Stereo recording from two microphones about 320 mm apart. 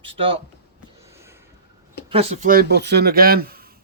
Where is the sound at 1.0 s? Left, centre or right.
Centre.